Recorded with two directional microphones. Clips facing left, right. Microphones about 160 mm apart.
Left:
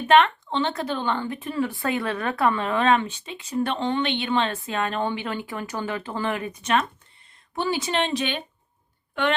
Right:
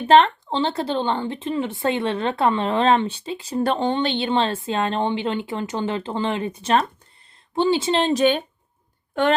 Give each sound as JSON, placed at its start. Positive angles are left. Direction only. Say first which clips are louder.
{"t": 0.1, "sound": "speech", "louder": "right 3 dB", "side_deg": -30}